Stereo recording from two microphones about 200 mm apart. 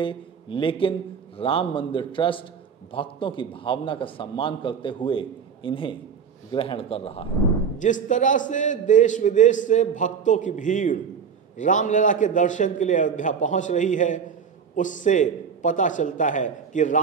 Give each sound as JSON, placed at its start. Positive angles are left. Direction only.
{"t": 0.0, "sound": "a man's voice", "side_deg": 25}
{"t": 7.8, "sound": "a man's voice", "side_deg": 40}